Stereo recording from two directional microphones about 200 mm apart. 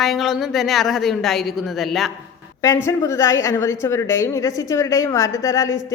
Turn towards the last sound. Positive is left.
turn(degrees=15)  # may be behind; listen again after turning